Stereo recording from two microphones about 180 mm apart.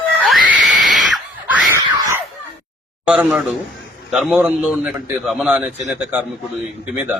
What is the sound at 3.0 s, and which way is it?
A man's voice, 10° right (ahead or behind).